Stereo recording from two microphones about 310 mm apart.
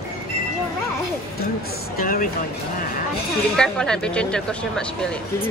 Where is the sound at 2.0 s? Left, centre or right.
Left.